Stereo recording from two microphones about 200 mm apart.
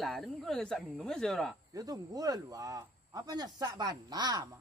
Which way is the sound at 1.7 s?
20° right (ahead or behind).